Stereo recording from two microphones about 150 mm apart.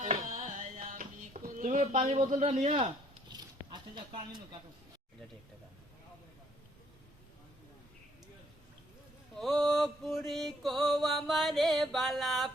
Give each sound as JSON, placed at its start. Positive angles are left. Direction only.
{"t": 0.0, "sound": "music", "side_deg": -45}
{"t": 3.3, "sound": "a sound", "side_deg": -30}
{"t": 9.3, "sound": "mantra", "side_deg": 0}